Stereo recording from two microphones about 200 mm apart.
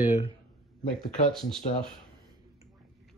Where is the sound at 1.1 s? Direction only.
Centre (ahead or behind).